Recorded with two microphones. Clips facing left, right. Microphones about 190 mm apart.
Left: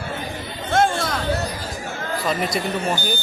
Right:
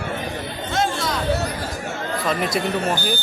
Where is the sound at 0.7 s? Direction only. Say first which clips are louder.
Left 4 dB; 55° left (ahead or behind).